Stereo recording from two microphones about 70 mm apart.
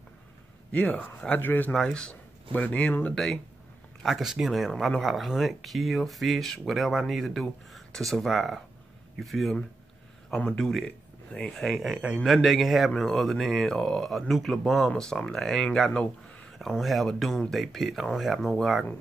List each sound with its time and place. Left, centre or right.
0.7 s speech: centre
1.7 s speech: centre
4.0 s speech: centre
11.9 s a man's voice: centre
12.2 s speech: centre
16.5 s speech: centre